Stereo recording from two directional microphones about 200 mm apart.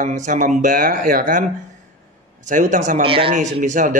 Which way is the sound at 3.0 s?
25° right (ahead or behind).